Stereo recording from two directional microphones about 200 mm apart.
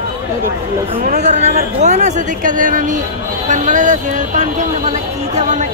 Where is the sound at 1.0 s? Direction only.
35° right (ahead or behind).